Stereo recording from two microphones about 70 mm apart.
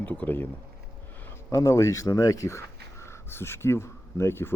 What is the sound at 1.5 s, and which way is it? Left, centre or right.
Speech, left.